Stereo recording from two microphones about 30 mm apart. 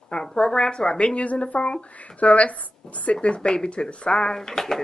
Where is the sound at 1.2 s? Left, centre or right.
Left.